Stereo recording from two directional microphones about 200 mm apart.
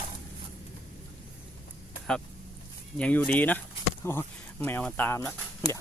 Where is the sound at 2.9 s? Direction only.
5° left (ahead or behind).